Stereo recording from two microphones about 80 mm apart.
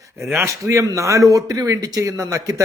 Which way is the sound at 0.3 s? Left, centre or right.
Right.